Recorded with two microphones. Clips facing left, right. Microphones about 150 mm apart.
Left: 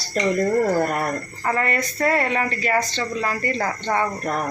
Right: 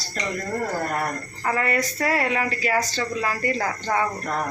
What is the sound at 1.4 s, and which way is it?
A woman's voice, 5° right (ahead or behind).